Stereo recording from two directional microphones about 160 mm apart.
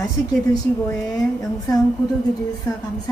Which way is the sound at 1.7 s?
25° left (ahead or behind).